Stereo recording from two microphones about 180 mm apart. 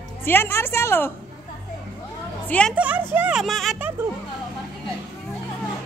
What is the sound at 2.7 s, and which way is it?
Speech, 10° right (ahead or behind).